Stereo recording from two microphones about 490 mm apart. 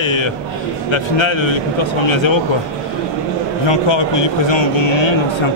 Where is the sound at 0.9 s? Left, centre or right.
Left.